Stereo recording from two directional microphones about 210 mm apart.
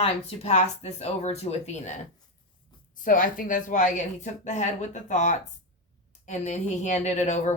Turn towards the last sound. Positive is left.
turn(degrees=35)  # may be behind; listen again after turning